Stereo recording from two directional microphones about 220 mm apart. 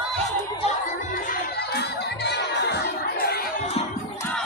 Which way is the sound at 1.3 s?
50° left (ahead or behind).